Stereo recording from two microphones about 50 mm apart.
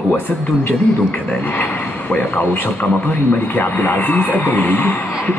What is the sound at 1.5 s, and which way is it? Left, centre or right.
A man's voice, left.